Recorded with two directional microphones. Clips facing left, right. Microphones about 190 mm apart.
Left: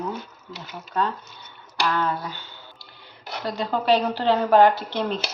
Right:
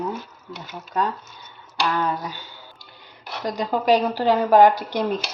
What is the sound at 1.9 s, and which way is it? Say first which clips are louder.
Speech: right 1 dB; 15° right (ahead or behind).